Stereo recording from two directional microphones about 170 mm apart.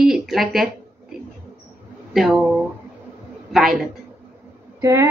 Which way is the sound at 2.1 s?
Centre (ahead or behind).